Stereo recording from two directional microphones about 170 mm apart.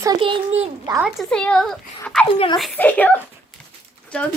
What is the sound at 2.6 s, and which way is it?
Speech, 5° left (ahead or behind).